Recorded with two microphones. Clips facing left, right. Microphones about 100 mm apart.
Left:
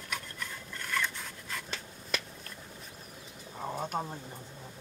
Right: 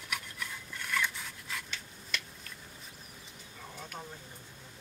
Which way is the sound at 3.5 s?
45° left (ahead or behind).